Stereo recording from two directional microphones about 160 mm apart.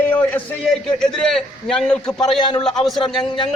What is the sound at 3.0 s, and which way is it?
Speech, 30° left (ahead or behind).